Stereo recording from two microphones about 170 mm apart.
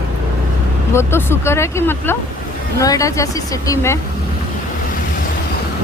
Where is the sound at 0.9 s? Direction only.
15° left (ahead or behind).